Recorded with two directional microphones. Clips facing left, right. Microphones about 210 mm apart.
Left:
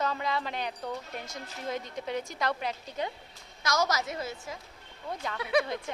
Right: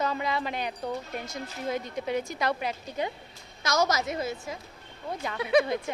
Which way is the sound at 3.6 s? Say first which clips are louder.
Right 3 dB; 25° right (ahead or behind).